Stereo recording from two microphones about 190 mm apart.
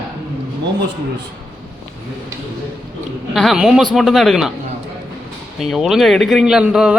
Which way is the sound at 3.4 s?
5° right (ahead or behind).